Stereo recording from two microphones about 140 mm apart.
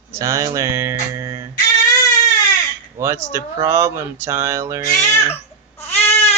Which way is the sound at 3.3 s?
20° right (ahead or behind).